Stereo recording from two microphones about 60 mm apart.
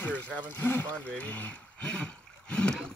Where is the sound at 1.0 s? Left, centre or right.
Left.